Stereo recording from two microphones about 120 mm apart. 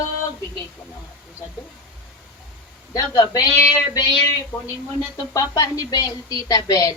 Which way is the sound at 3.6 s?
30° left (ahead or behind).